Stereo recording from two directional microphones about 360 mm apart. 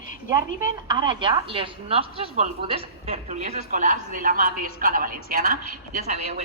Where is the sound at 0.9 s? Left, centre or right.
Centre.